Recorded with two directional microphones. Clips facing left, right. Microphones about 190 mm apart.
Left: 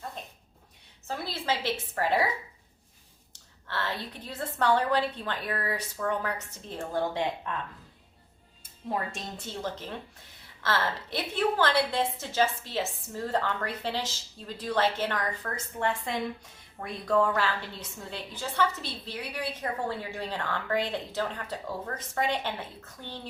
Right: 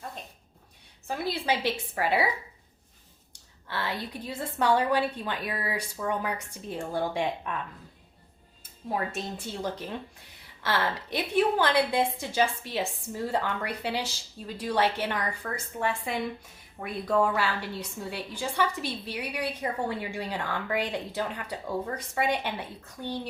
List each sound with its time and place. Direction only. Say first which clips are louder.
1.0 s a woman's voice: right 3 dB; 15° right (ahead or behind)
3.7 s a woman's voice: right 1 dB; 10° right (ahead or behind)
9.4 s a woman's voice: right 2 dB; 15° right (ahead or behind)